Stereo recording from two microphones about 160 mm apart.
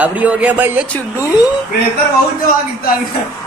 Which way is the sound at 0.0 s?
10° right (ahead or behind).